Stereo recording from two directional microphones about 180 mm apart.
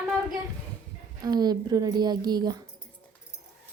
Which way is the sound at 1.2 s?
20° right (ahead or behind).